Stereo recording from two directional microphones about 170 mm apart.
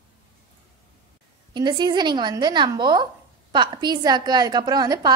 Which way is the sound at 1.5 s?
25° right (ahead or behind).